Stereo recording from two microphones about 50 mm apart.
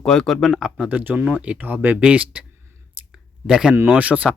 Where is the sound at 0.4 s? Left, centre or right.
Centre.